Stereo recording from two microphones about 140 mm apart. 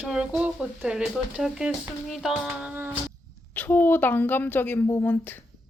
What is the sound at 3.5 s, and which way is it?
A woman's voice, 10° left (ahead or behind).